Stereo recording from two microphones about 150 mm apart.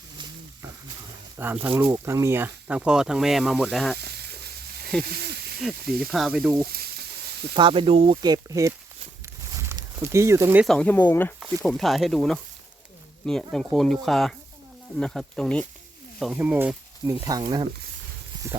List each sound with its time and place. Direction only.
1.6 s speech: 10° right (ahead or behind)
2.6 s speech: 5° right (ahead or behind)
3.9 s sizzle: 90° right
5.0 s snake: 90° right
5.5 s speech: 5° right (ahead or behind)
6.7 s frying: 90° right
7.5 s speech: 35° right (ahead or behind)
9.2 s a sound: 20° right (ahead or behind)
10.7 s speech: 10° left (ahead or behind)
11.6 s speech: centre (ahead or behind)
16.3 s speech: 10° right (ahead or behind)
17.1 s speech: 25° right (ahead or behind)